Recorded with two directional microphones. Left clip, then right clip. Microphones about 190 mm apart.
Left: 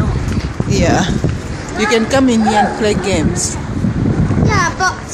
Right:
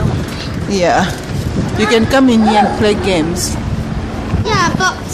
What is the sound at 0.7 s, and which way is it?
A woman's voice, 5° right (ahead or behind).